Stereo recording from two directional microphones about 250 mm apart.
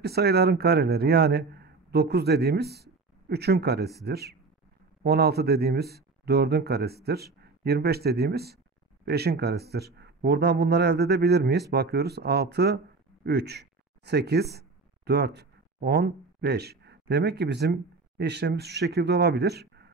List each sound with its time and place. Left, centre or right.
0.0 s a man's voice: right